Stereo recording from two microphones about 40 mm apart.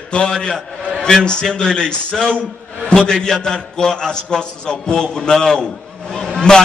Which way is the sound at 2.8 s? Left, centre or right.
Centre.